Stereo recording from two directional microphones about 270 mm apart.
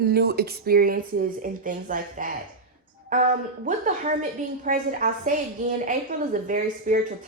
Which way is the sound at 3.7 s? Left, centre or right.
Right.